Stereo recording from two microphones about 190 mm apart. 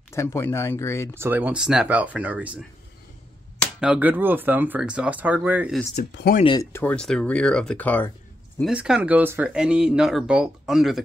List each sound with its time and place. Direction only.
0.1 s speech: 15° left (ahead or behind)
1.1 s speech: 10° right (ahead or behind)
3.8 s speech: 5° right (ahead or behind)
6.0 s speech: 50° left (ahead or behind)
6.4 s speech: 25° left (ahead or behind)
6.7 s speech: 10° left (ahead or behind)
8.5 s speech: 5° right (ahead or behind)